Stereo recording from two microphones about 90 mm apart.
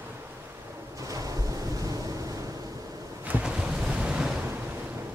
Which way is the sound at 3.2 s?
15° right (ahead or behind).